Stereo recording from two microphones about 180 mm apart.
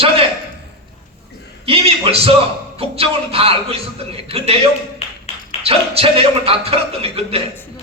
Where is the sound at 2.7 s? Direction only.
35° right (ahead or behind).